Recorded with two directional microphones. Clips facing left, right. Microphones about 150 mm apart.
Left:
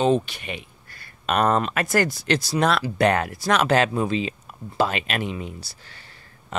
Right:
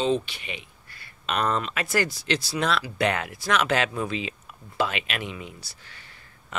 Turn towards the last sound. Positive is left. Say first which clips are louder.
# left 2 dB
turn(degrees=35)  # may be behind; listen again after turning